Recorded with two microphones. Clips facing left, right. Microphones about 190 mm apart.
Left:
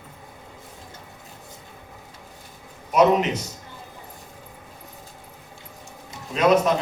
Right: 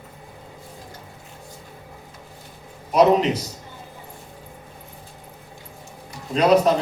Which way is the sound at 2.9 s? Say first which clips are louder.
Right 2 dB; 35° right (ahead or behind).